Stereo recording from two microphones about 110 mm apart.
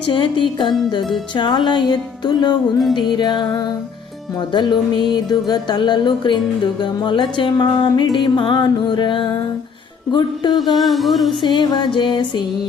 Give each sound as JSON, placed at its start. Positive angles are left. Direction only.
{"t": 0.0, "sound": "music", "side_deg": 50}
{"t": 4.7, "sound": "music", "side_deg": 40}
{"t": 10.5, "sound": "music", "side_deg": 0}
{"t": 11.4, "sound": "music", "side_deg": 45}